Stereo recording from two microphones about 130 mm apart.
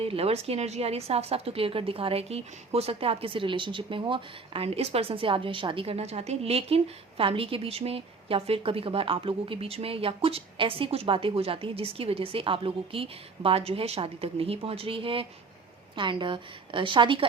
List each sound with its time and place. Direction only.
0.0 s a woman's voice: 50° right (ahead or behind)